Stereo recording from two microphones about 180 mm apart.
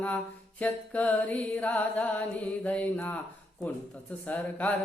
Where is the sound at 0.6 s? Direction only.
10° left (ahead or behind).